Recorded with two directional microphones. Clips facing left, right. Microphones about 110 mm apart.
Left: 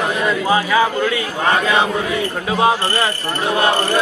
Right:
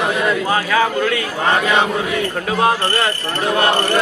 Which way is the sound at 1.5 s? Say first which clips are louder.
Even; 15° right (ahead or behind).